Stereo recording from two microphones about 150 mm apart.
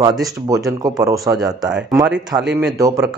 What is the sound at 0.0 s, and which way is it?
Speech, 25° right (ahead or behind).